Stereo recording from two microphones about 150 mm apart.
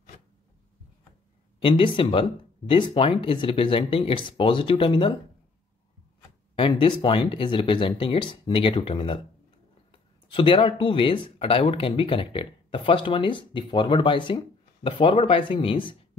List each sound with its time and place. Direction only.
1.6 s speech: 35° left (ahead or behind)
6.5 s speech: 35° left (ahead or behind)
10.2 s speech: 35° left (ahead or behind)